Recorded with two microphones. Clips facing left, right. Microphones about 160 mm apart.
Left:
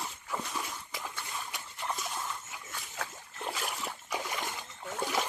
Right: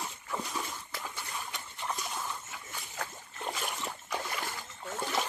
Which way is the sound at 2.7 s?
Centre (ahead or behind).